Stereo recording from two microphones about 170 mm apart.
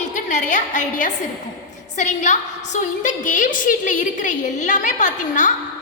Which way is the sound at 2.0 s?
45° left (ahead or behind).